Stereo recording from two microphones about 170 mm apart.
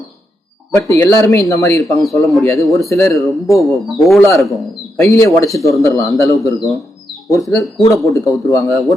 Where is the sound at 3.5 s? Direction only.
15° left (ahead or behind).